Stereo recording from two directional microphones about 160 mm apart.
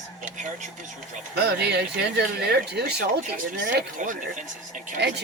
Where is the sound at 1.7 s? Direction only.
90° right.